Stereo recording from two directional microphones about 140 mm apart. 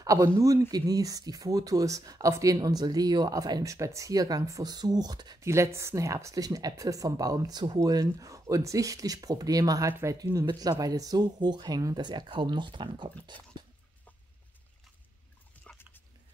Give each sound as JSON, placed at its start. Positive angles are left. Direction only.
{"t": 0.0, "sound": "speech", "side_deg": -25}
{"t": 15.7, "sound": "dog", "side_deg": 5}